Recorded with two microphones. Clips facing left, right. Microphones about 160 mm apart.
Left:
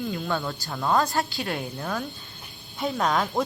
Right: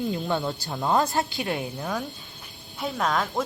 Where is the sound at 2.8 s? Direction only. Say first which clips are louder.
Left 1 dB; centre (ahead or behind).